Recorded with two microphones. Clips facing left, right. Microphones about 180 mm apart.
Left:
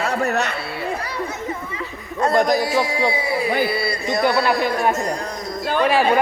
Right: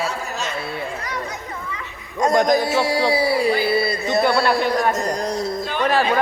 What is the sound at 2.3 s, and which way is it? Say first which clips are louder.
Speech: right 1 dB; 5° left (ahead or behind).